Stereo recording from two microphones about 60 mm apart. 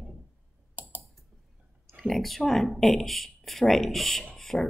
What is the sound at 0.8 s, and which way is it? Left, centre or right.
Typing, right.